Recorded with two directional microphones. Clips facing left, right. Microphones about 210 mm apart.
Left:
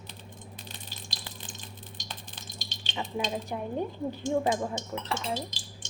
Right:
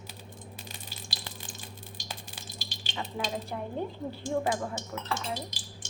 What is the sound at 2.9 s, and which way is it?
Speech, 15° left (ahead or behind).